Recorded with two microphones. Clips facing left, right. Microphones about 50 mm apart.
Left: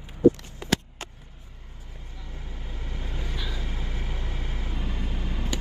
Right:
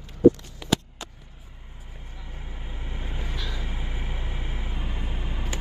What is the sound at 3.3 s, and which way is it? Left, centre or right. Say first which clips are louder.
Vehicle: even; centre.